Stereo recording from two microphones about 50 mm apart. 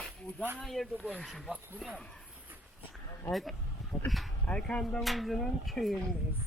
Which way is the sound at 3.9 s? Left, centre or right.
Left.